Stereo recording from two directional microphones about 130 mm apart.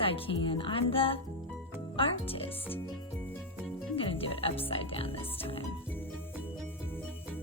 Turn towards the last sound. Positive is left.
turn(degrees=45)  # may be behind; listen again after turning